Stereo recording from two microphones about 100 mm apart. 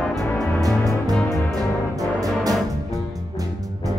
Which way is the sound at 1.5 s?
35° right (ahead or behind).